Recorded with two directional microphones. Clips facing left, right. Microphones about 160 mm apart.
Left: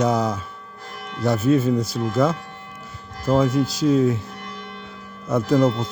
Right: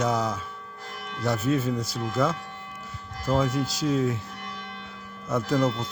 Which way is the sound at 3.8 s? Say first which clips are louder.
Left 7 dB; 35° left (ahead or behind).